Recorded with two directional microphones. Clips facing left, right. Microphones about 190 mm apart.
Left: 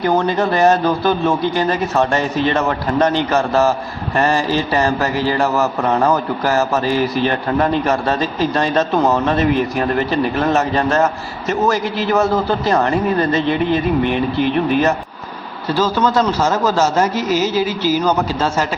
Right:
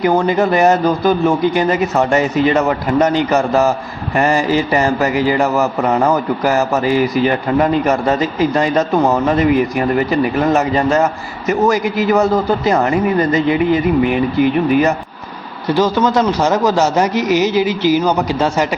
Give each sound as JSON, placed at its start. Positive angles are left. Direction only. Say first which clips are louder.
{"t": 0.0, "sound": "a man's voice", "louder": "right 3 dB", "side_deg": -10}